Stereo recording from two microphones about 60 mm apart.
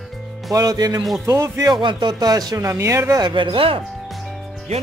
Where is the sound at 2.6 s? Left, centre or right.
Right.